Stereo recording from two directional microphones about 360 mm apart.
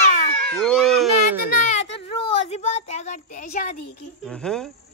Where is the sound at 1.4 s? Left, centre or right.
Centre.